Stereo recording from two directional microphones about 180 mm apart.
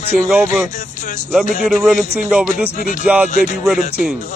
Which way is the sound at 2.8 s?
45° left (ahead or behind).